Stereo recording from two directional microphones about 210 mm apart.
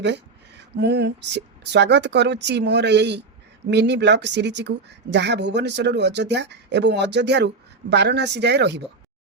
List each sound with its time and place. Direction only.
0.8 s speech: 55° right (ahead or behind)